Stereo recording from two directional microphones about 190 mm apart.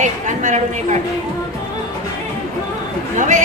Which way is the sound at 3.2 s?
40° right (ahead or behind).